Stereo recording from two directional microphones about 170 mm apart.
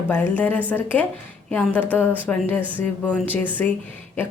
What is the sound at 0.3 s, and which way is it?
A woman's voice, 10° left (ahead or behind).